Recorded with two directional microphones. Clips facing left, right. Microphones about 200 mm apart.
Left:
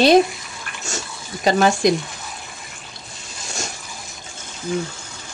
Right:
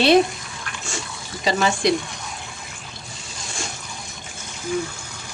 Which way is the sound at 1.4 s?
50° left (ahead or behind).